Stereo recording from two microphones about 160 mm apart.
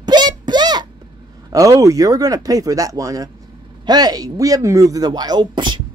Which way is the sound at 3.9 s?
25° right (ahead or behind).